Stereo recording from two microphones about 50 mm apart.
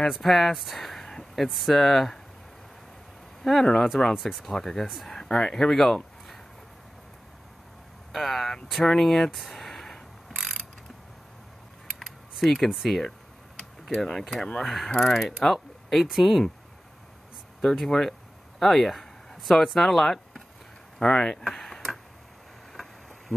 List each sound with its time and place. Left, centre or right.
0.1 s speech: centre
3.6 s speech: centre
4.1 s mechanisms: centre
5.1 s a sound: centre
8.1 s mechanisms: centre
8.6 s a sound: centre
12.0 s typing: centre
12.6 s mechanisms: centre
13.6 s speech: centre
14.6 s mechanisms: centre
17.6 s speech: centre
21.0 s speech: centre
22.7 s a sound: centre